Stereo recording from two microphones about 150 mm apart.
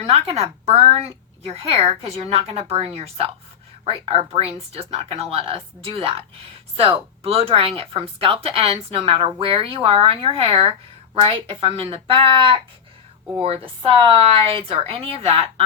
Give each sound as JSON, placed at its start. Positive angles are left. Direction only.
{"t": 0.0, "sound": "a woman's voice", "side_deg": -45}